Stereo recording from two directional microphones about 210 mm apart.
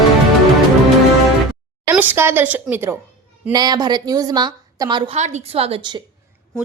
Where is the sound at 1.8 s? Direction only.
10° right (ahead or behind).